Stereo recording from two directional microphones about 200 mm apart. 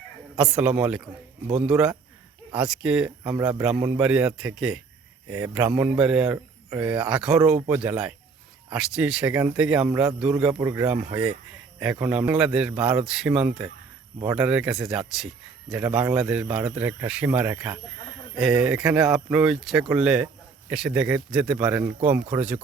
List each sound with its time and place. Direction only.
0.3 s a man's voice: 5° right (ahead or behind)
3.3 s a man's voice: 15° right (ahead or behind)